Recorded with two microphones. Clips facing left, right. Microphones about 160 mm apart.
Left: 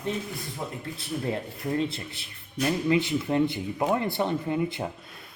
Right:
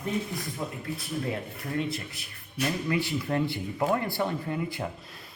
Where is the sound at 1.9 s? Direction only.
25° left (ahead or behind).